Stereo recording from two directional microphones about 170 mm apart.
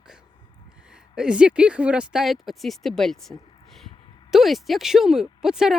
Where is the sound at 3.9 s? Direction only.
30° left (ahead or behind).